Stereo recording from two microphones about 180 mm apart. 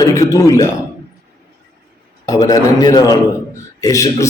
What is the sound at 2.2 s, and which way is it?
A man's voice, 20° left (ahead or behind).